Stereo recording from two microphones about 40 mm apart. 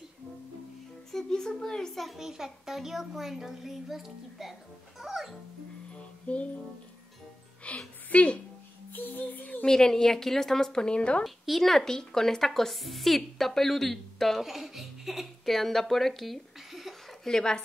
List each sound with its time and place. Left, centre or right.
1.1 s a woman's voice: centre
2.1 s a child's voice: centre
5.9 s music: left
7.7 s music: left
8.1 s a woman's voice: left
8.9 s music: left
9.7 s a woman's voice: centre
11.2 s a woman's voice: centre
14.4 s speech: centre
15.5 s speech: centre
17.3 s speech: centre